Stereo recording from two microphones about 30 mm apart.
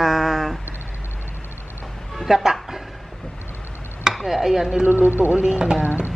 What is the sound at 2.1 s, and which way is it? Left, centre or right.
Speech, centre.